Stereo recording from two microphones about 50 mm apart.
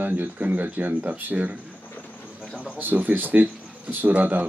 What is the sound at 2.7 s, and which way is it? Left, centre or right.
Speech, right.